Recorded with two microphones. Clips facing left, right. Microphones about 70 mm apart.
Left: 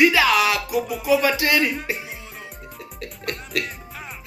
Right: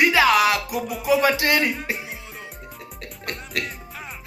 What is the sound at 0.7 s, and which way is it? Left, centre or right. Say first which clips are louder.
Speech: left 3 dB; centre.